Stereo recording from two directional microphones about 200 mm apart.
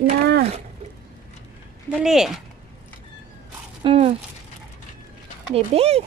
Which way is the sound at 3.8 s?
30° right (ahead or behind).